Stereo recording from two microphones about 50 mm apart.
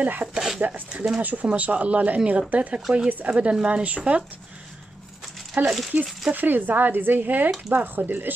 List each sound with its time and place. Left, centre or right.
0.0 s speech: right
0.3 s a sound: centre
0.6 s speech: right
5.6 s speech: right